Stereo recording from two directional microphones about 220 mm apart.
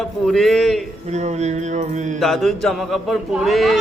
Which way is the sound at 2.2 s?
Centre (ahead or behind).